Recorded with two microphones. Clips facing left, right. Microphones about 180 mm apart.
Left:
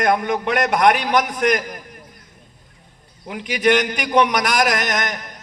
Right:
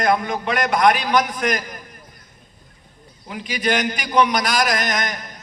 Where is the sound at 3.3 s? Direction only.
65° left (ahead or behind).